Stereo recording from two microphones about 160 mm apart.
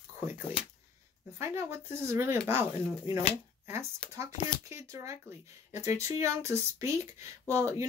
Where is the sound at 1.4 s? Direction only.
15° right (ahead or behind).